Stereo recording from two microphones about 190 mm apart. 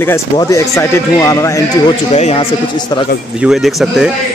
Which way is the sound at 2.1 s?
30° left (ahead or behind).